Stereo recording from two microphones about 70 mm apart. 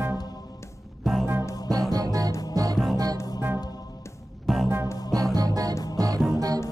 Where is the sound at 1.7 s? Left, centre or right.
Right.